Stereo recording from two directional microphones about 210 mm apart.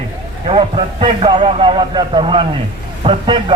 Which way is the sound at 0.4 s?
25° right (ahead or behind).